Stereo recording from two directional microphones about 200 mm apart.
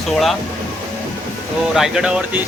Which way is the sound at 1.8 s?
Centre (ahead or behind).